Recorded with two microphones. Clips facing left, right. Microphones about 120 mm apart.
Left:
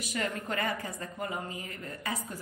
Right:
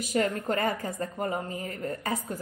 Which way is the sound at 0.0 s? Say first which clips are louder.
Right 7 dB; 40° right (ahead or behind).